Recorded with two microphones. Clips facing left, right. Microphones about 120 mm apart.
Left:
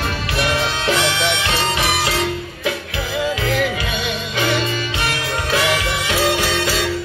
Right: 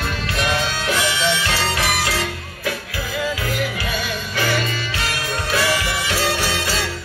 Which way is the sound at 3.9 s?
20° left (ahead or behind).